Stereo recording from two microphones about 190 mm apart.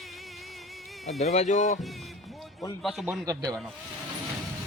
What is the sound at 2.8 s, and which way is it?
Speech, centre (ahead or behind).